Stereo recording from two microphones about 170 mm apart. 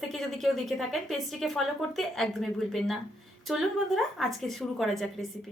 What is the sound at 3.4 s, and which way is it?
A woman's voice, centre (ahead or behind).